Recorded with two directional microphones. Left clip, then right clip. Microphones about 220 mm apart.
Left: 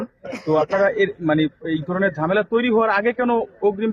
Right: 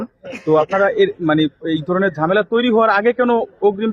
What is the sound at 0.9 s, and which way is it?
A man's voice, 50° right (ahead or behind).